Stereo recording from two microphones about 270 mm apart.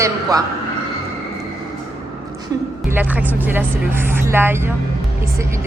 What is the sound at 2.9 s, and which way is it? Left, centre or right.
A woman's voice, centre.